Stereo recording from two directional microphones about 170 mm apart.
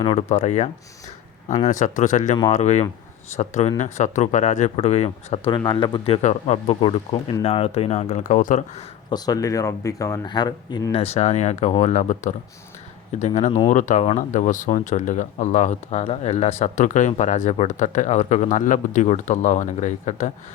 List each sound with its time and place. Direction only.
0.0 s speech: 35° left (ahead or behind)
6.2 s speech: 40° left (ahead or behind)
9.0 s speech: 25° left (ahead or behind)
11.0 s speech: 40° left (ahead or behind)